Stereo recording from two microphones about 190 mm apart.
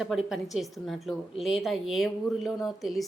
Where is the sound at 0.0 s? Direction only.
Centre (ahead or behind).